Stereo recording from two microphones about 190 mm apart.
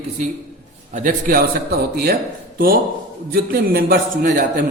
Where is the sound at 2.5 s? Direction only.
50° right (ahead or behind).